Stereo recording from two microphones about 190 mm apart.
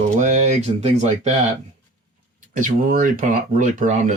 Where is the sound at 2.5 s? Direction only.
45° right (ahead or behind).